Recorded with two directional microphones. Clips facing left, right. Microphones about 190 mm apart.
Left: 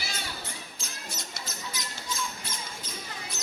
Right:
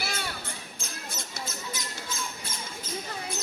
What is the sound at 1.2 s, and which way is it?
Squeak, 50° right (ahead or behind).